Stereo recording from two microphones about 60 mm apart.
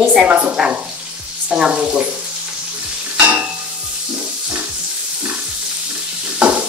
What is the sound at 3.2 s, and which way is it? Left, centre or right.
Stir, right.